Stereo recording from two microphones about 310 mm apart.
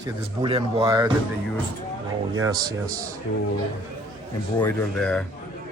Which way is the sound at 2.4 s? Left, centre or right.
Centre.